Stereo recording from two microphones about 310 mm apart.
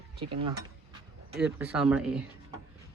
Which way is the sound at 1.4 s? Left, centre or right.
Centre.